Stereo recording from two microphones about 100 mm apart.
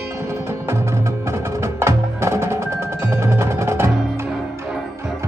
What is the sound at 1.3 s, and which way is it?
Music, 30° right (ahead or behind).